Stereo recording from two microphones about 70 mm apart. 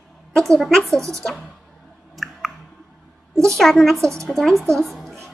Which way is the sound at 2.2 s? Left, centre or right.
Centre.